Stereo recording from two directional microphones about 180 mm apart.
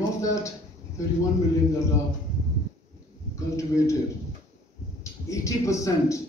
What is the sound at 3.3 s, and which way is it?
Speech, 15° left (ahead or behind).